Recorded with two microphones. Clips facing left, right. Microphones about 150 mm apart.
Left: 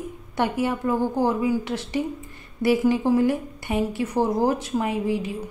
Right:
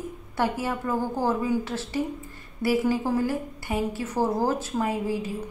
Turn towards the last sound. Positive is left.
turn(degrees=20)  # may be behind; listen again after turning